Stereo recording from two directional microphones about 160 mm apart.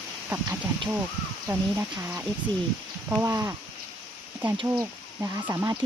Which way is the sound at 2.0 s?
10° right (ahead or behind).